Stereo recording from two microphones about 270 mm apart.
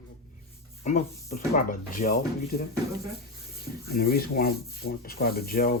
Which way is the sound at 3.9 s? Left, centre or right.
Left.